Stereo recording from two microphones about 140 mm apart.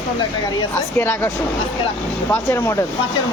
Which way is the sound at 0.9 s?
15° left (ahead or behind).